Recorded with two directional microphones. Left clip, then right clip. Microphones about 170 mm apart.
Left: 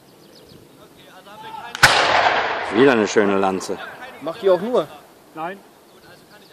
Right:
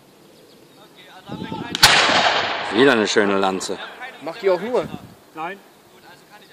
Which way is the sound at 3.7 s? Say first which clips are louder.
Even; 60° left (ahead or behind).